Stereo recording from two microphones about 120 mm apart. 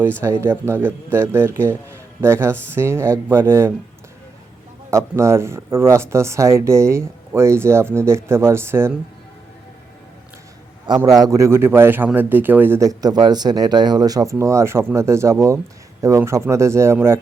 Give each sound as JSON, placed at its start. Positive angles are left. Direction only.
{"t": 0.4, "sound": "a man's voice", "side_deg": -20}
{"t": 4.9, "sound": "a man's voice", "side_deg": -25}
{"t": 10.8, "sound": "a man's voice", "side_deg": -35}